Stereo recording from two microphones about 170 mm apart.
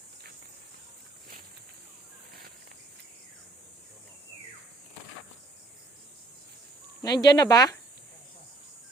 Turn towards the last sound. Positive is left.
turn(degrees=20)  # may be behind; listen again after turning